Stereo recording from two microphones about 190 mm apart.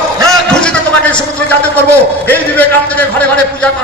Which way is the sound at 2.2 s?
10° left (ahead or behind).